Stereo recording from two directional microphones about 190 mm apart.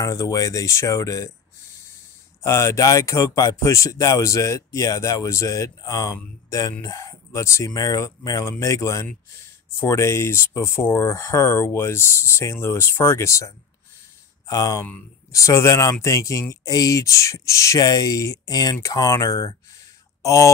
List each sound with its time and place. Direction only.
0.0 s speech: 15° left (ahead or behind)
2.4 s speech: 15° left (ahead or behind)
14.5 s speech: 15° left (ahead or behind)